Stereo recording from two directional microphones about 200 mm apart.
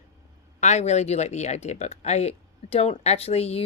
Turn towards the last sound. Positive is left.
turn(degrees=30)  # may be behind; listen again after turning